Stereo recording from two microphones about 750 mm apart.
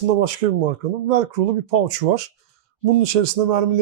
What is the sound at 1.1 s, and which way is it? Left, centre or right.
Speech, right.